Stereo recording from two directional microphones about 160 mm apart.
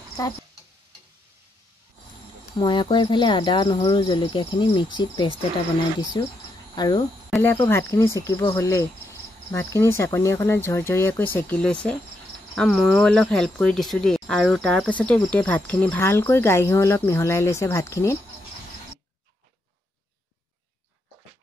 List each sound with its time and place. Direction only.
2.6 s speech: 30° left (ahead or behind)
7.5 s speech: 15° left (ahead or behind)